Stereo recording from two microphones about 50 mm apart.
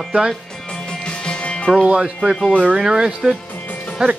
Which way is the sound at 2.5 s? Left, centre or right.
Right.